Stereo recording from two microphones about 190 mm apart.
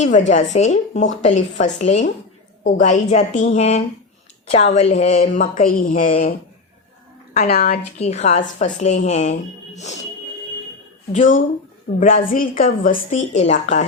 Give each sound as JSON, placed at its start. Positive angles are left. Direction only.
{"t": 0.0, "sound": "a woman's voice", "side_deg": 40}
{"t": 7.5, "sound": "a woman's voice", "side_deg": 55}
{"t": 7.9, "sound": "speech", "side_deg": 35}
{"t": 11.1, "sound": "a woman's voice", "side_deg": 40}